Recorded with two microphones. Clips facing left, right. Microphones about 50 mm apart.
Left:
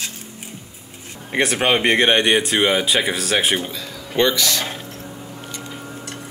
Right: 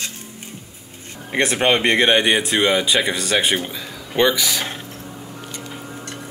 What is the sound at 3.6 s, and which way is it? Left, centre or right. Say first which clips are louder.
Speech: even; centre.